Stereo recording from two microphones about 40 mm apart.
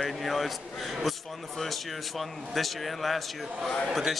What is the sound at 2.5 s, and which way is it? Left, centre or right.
Speech, centre.